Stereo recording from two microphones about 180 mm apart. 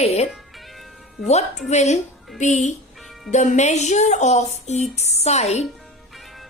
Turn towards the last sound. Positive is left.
turn(degrees=35)  # may be behind; listen again after turning